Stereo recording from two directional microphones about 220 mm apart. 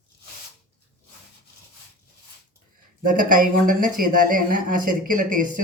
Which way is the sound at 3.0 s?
40° right (ahead or behind).